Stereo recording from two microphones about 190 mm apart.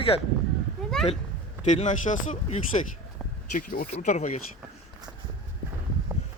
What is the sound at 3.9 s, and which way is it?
Speech, 35° left (ahead or behind).